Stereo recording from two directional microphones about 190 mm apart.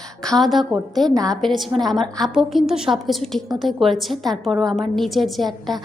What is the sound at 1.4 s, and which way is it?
A woman's voice, centre (ahead or behind).